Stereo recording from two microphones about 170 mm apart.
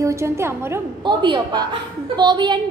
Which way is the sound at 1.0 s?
25° right (ahead or behind).